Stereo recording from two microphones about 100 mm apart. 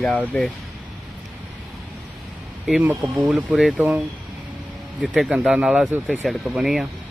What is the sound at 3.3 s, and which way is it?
Speech, 5° right (ahead or behind).